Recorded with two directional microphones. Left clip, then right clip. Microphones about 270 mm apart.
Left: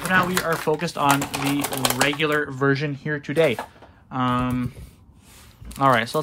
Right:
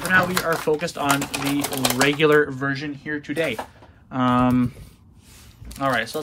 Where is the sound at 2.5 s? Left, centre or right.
Centre.